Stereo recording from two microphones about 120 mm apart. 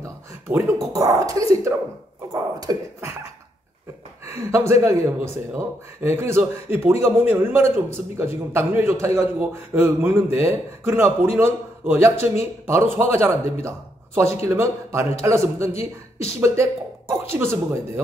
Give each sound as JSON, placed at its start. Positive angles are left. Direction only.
{"t": 0.0, "sound": "a man's voice", "side_deg": -20}
{"t": 4.3, "sound": "a man's voice", "side_deg": -20}